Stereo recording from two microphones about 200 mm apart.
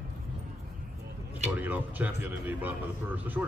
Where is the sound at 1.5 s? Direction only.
10° right (ahead or behind).